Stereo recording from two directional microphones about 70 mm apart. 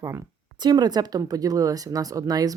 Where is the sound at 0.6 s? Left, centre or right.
Right.